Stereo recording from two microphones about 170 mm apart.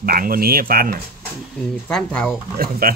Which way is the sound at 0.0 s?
55° right (ahead or behind).